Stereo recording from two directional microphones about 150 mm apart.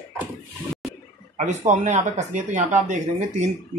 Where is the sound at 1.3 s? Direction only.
50° right (ahead or behind).